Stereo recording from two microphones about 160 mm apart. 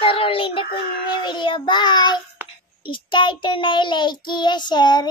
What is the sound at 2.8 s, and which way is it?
Child singing, 30° left (ahead or behind).